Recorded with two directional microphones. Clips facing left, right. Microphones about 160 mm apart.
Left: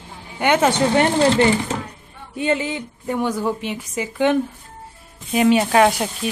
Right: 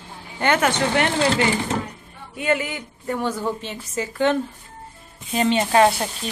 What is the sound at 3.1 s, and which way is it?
A woman's voice, 10° left (ahead or behind).